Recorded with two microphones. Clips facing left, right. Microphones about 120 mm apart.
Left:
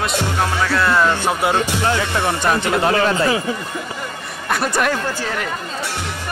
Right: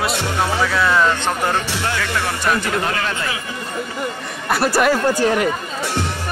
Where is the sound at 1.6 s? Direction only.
20° left (ahead or behind).